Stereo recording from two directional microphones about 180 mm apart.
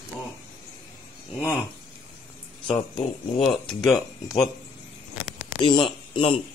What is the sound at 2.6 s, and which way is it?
Speech, 30° left (ahead or behind).